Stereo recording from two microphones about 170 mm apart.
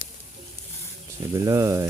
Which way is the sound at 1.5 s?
20° right (ahead or behind).